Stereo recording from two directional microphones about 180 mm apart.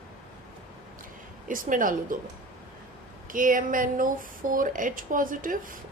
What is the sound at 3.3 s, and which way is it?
Speech, 50° right (ahead or behind).